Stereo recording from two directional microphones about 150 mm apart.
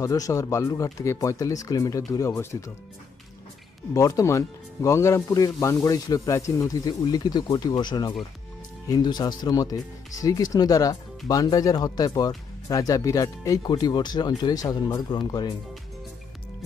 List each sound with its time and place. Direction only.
0.0 s speech: 20° left (ahead or behind)
3.9 s speech: 20° left (ahead or behind)